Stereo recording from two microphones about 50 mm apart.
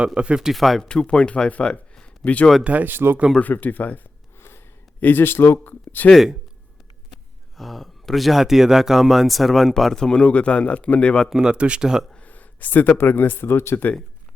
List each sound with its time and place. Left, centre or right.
0.0 s speech: right
0.5 s speech: centre
0.8 s speech: centre
1.5 s speech: left
2.6 s speech: right
3.4 s speech: left
4.4 s a sound: left
4.9 s speech: left
5.6 s a sound: left
7.1 s speech: centre; by 11.3 s left
11.3 s speech: centre
12.1 s a sound: left
13.1 s speech: left